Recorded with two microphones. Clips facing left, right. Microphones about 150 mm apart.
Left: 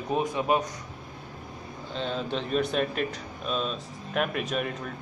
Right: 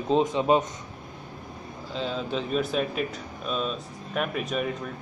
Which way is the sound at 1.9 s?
5° right (ahead or behind).